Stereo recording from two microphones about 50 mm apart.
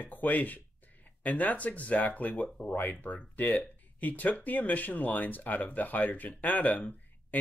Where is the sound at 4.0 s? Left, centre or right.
Left.